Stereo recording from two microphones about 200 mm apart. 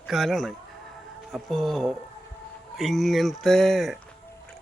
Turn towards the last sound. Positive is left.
turn(degrees=0)  # may be behind; listen again after turning